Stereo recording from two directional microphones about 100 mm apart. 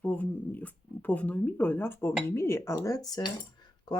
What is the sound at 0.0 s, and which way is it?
Speech, 15° left (ahead or behind).